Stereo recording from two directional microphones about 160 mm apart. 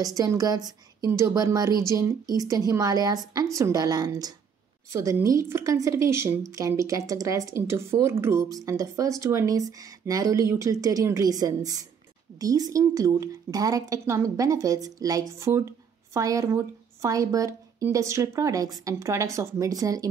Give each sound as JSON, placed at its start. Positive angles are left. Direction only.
{"t": 0.0, "sound": "a woman's voice", "side_deg": -20}